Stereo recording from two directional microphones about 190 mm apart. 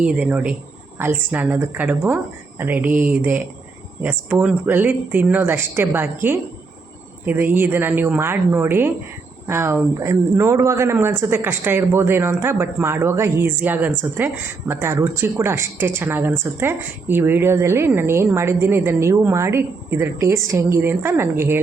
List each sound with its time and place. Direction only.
0.0 s speech: 5° right (ahead or behind)